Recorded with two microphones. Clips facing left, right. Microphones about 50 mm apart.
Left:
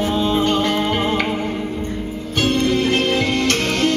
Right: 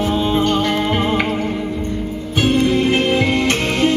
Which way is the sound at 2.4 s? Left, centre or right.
Centre.